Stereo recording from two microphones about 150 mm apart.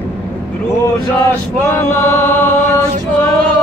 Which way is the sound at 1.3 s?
15° left (ahead or behind).